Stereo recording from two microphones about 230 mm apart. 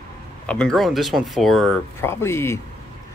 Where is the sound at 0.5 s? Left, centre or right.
Centre.